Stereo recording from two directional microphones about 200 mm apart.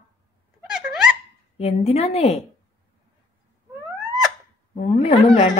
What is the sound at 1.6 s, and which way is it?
Speech, 30° left (ahead or behind).